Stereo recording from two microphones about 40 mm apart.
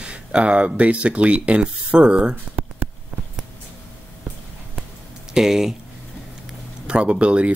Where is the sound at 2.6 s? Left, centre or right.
Right.